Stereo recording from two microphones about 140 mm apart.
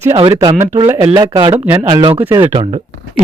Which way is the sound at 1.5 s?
20° right (ahead or behind).